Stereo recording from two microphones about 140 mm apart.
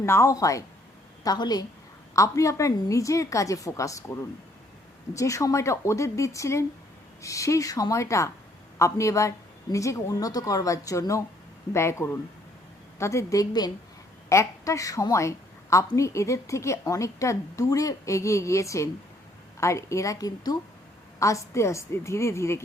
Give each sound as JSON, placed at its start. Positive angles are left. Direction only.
{"t": 0.0, "sound": "a woman's voice", "side_deg": 20}